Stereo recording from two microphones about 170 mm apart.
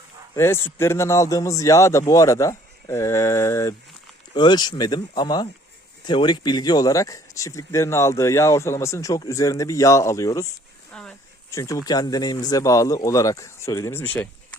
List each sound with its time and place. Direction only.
0.3 s a man's voice: 15° left (ahead or behind)
10.9 s a sound: 5° left (ahead or behind)
11.5 s speech: 20° left (ahead or behind)